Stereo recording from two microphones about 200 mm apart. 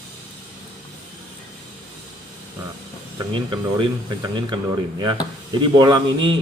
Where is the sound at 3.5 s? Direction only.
20° right (ahead or behind).